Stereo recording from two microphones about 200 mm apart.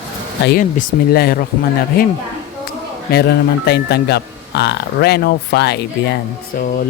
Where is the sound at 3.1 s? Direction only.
50° left (ahead or behind).